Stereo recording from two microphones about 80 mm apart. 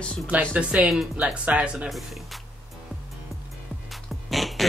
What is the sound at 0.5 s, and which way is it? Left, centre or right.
Speech, centre.